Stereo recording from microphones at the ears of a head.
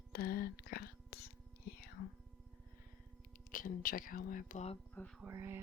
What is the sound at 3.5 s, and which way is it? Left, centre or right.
Speech, left.